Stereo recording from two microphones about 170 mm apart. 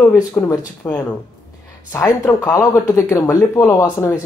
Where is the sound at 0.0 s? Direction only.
15° left (ahead or behind).